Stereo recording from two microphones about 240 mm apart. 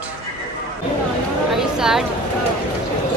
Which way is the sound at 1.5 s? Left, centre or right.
Centre.